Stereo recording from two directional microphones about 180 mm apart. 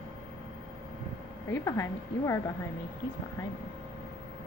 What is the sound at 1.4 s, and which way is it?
Speech, 15° left (ahead or behind).